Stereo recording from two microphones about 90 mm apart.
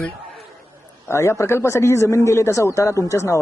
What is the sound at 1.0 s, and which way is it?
Speech, 30° left (ahead or behind).